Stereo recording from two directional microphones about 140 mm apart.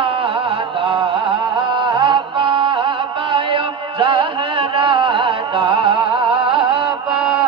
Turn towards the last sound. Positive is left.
turn(degrees=-35)  # may be behind; listen again after turning